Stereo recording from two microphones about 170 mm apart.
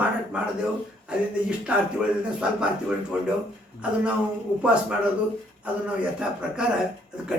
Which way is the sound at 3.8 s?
5° right (ahead or behind).